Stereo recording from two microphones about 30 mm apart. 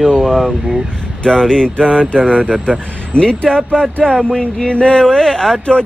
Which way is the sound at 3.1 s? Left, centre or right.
Left.